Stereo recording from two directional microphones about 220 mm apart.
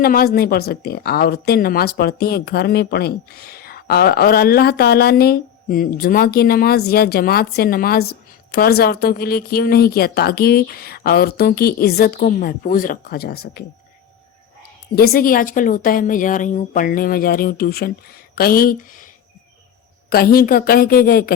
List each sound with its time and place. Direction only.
0.0 s speech: 40° left (ahead or behind)
14.9 s speech: 45° left (ahead or behind)
20.1 s speech: 40° left (ahead or behind)